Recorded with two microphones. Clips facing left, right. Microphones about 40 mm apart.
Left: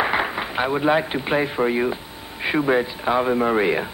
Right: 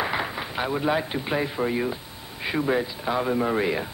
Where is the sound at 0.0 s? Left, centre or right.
Left.